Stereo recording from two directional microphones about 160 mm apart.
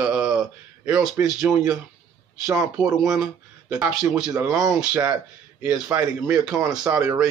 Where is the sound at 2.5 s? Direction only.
5° right (ahead or behind).